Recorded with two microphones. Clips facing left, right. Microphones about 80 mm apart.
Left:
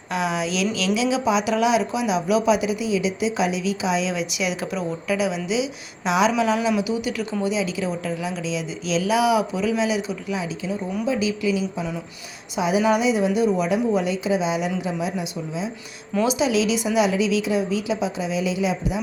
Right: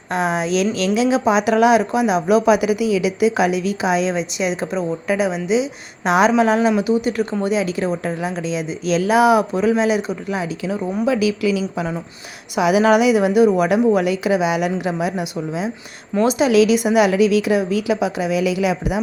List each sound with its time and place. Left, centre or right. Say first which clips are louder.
0.1 s speech: right 5 dB; right
5.0 s speech: right 3 dB; right
11.0 s a woman's voice: right 5 dB; right
16.2 s speech: right 7 dB; right